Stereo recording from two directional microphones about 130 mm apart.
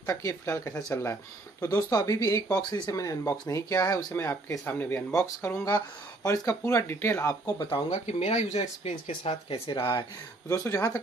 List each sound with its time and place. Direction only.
0.0 s speech: 20° left (ahead or behind)
7.9 s speech: 60° left (ahead or behind)
9.8 s speech: 30° left (ahead or behind)
10.5 s speech: 20° left (ahead or behind)